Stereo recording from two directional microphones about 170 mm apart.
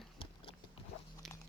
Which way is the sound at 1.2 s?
Centre (ahead or behind).